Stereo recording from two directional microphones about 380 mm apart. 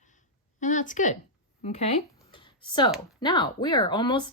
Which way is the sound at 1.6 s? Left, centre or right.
Centre.